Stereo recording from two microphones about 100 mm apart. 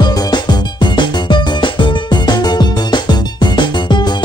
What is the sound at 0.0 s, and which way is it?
Music, 45° left (ahead or behind).